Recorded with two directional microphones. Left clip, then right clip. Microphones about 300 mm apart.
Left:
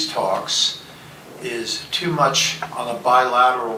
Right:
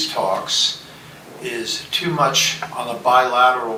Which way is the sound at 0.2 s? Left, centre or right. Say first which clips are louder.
Even; centre.